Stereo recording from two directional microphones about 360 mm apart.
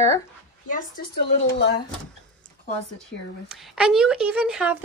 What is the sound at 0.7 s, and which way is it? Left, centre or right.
Speech, left.